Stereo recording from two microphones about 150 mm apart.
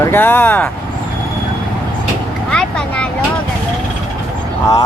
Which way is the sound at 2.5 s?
5° left (ahead or behind).